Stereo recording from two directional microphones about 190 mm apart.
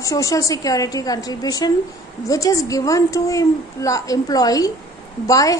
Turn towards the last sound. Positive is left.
turn(degrees=20)  # may be behind; listen again after turning